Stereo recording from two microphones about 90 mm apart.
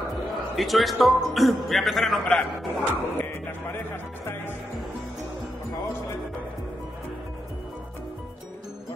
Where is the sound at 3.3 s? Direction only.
25° left (ahead or behind).